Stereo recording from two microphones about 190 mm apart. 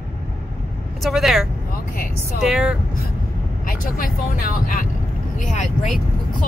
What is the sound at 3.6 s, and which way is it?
Speech, 50° left (ahead or behind).